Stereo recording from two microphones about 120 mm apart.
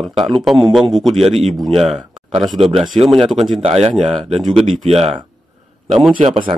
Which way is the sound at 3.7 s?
60° right (ahead or behind).